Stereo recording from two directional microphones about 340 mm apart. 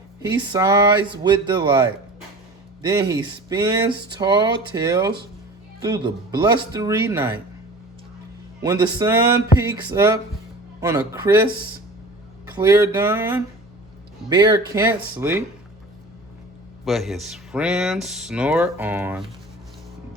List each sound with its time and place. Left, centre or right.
0.5 s speech: centre
2.8 s speech: centre
8.6 s speech: centre
16.8 s speech: centre